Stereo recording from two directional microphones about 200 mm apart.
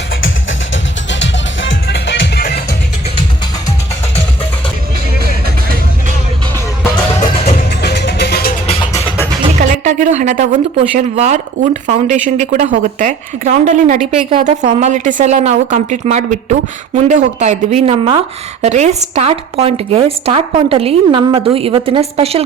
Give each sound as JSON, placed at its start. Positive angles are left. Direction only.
{"t": 1.2, "sound": "music", "side_deg": 65}
{"t": 7.8, "sound": "music", "side_deg": 55}
{"t": 9.8, "sound": "a woman's voice", "side_deg": -40}